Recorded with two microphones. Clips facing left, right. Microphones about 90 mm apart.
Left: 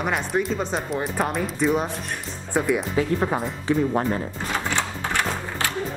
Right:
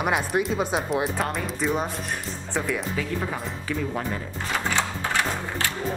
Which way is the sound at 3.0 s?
35° left (ahead or behind).